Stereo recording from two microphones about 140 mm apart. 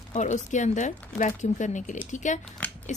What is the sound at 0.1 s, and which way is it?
Speech, 60° left (ahead or behind).